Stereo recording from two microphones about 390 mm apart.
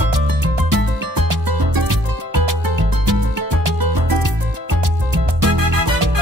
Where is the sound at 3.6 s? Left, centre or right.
Right.